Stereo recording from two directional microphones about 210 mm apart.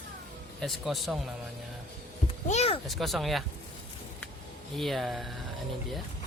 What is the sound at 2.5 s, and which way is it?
Speech, 30° left (ahead or behind).